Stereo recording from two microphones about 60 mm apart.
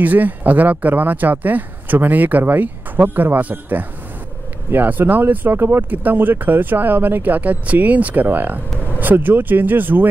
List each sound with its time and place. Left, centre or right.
0.0 s speech: right